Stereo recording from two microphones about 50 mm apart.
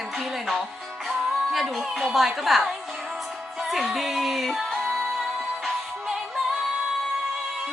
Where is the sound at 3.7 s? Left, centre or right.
Centre.